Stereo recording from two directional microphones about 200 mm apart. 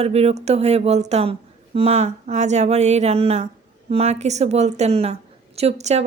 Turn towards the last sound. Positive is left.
turn(degrees=-35)  # may be behind; listen again after turning